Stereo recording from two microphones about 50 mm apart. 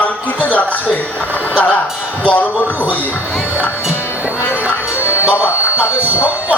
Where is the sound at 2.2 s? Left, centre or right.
Left.